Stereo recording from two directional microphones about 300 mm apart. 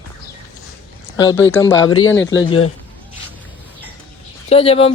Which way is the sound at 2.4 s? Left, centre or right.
Centre.